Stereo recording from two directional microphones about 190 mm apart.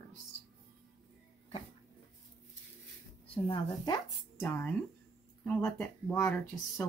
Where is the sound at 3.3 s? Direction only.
25° left (ahead or behind).